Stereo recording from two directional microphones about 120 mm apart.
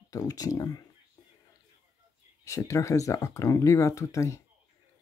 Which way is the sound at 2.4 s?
25° left (ahead or behind).